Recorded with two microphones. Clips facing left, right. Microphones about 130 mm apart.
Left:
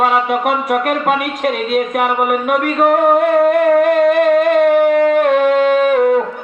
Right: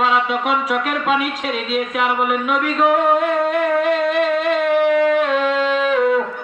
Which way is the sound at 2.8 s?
55° left (ahead or behind).